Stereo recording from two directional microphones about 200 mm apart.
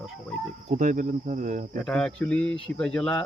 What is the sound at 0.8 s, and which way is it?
Speech, 40° right (ahead or behind).